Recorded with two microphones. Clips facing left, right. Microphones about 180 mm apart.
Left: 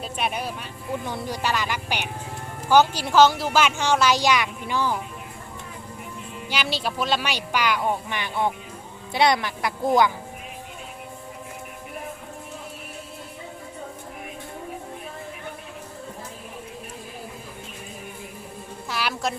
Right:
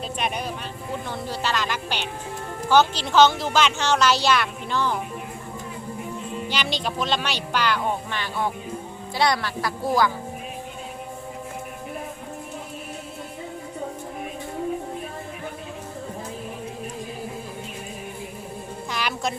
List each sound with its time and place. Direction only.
0.0 s speech: 5° left (ahead or behind)
6.5 s a woman's voice: 5° left (ahead or behind)
18.9 s music: 5° left (ahead or behind)